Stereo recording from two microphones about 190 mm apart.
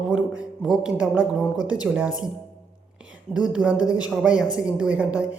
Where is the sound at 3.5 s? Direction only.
5° right (ahead or behind).